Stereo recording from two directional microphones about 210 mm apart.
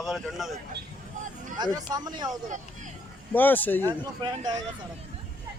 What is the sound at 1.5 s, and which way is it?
Speech, 20° right (ahead or behind).